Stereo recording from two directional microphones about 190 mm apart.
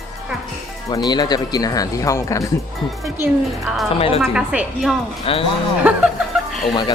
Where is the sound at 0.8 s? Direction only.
20° left (ahead or behind).